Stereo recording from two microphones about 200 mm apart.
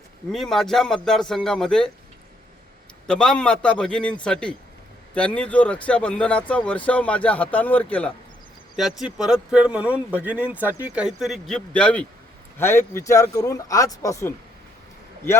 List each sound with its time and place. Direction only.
0.3 s speech: centre (ahead or behind)
3.1 s speech: 5° left (ahead or behind)